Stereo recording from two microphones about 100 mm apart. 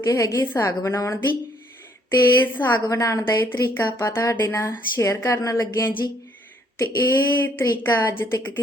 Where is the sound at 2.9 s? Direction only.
35° left (ahead or behind).